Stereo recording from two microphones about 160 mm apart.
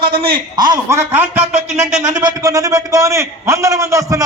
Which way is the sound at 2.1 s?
20° right (ahead or behind).